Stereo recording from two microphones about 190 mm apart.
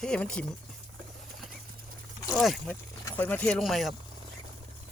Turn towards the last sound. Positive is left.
turn(degrees=0)  # may be behind; listen again after turning